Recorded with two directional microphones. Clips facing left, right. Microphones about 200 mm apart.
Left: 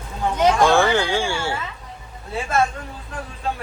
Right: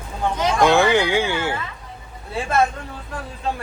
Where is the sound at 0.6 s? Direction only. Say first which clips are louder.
Right 1 dB; 15° right (ahead or behind).